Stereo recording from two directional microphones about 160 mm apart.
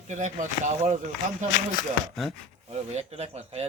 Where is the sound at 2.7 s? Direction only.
40° right (ahead or behind).